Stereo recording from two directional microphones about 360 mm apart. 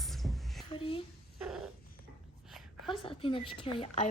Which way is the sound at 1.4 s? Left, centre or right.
Centre.